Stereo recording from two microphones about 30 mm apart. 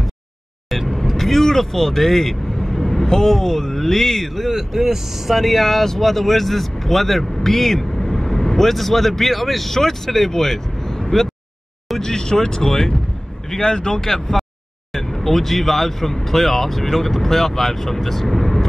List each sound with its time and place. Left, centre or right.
0.7 s speech: centre
4.5 s speech: centre
5.3 s speech: centre
12.0 s speech: centre
13.9 s speech: centre